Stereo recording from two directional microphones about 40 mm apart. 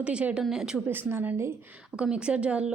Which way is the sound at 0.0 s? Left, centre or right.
Right.